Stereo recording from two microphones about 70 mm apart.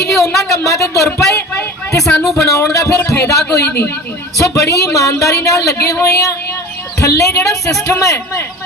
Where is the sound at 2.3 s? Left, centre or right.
Left.